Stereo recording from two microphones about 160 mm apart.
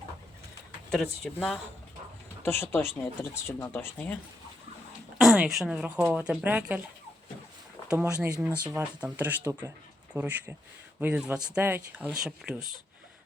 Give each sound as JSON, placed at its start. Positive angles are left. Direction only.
{"t": 0.9, "sound": "speech", "side_deg": 0}
{"t": 2.4, "sound": "speech", "side_deg": 15}
{"t": 5.1, "sound": "a woman's voice", "side_deg": -5}
{"t": 7.8, "sound": "a sound", "side_deg": 20}
{"t": 8.4, "sound": "speech", "side_deg": -10}